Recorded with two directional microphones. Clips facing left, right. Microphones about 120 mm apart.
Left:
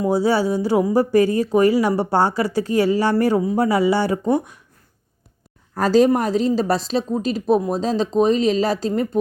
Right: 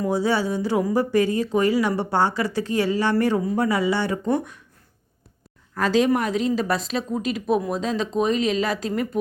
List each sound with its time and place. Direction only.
0.0 s speech: 35° left (ahead or behind)
5.7 s speech: 35° left (ahead or behind)